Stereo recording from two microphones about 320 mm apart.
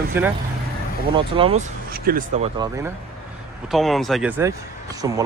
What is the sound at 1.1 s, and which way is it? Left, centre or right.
Speech, centre.